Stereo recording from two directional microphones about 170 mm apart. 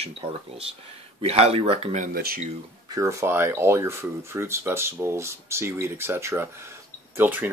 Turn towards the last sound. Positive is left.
turn(degrees=-10)  # may be behind; listen again after turning